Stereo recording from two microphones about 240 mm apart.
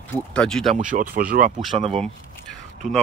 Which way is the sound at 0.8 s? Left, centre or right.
Right.